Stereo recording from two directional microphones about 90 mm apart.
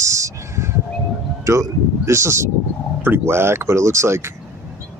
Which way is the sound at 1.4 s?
35° right (ahead or behind).